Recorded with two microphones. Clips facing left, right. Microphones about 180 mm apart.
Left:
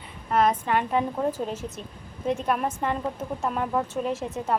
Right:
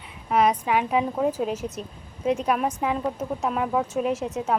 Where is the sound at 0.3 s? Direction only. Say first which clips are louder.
Right 1 dB; centre (ahead or behind).